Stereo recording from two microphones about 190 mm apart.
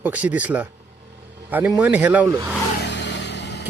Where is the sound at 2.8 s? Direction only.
65° left (ahead or behind).